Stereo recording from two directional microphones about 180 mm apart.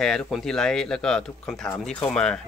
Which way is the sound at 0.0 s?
Centre (ahead or behind).